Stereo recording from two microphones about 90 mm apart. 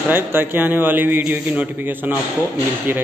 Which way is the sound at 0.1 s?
25° right (ahead or behind).